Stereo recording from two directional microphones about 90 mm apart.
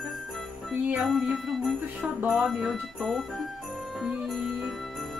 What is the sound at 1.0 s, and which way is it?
Music, centre (ahead or behind).